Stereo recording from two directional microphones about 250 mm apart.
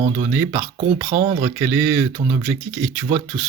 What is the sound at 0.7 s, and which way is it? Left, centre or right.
Speech, right.